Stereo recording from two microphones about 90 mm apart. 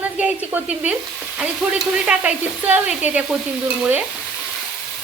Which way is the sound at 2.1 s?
20° right (ahead or behind).